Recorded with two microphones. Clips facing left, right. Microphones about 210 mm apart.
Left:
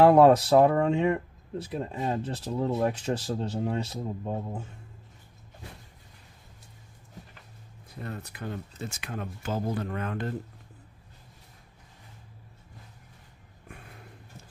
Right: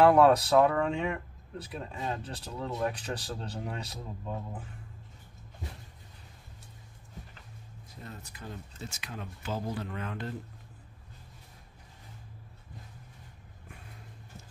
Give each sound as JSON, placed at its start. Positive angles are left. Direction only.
{"t": 0.0, "sound": "speech", "side_deg": 25}
{"t": 8.0, "sound": "speech", "side_deg": 65}